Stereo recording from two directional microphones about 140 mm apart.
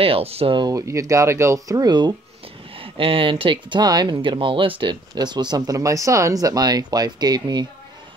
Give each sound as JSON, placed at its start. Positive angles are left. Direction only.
{"t": 0.0, "sound": "speech", "side_deg": -45}
{"t": 0.6, "sound": "speech", "side_deg": -25}